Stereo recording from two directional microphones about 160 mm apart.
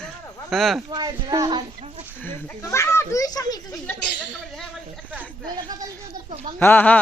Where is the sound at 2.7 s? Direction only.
15° left (ahead or behind).